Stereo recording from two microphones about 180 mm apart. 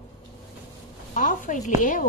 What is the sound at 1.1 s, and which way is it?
Speech, 45° left (ahead or behind).